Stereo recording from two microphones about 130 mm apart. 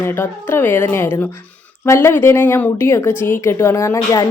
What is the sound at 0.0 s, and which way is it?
A woman's voice, 20° left (ahead or behind).